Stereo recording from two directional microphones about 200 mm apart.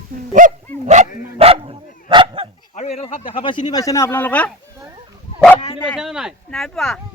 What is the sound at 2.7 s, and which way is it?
Speech, 35° left (ahead or behind).